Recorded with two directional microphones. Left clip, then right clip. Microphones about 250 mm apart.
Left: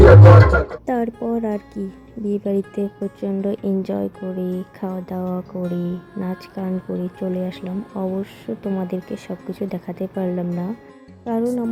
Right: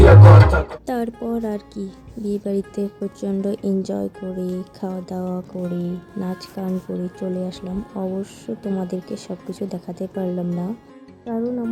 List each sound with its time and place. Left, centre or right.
0.0 s music: centre
0.9 s a woman's voice: centre
11.3 s speech: left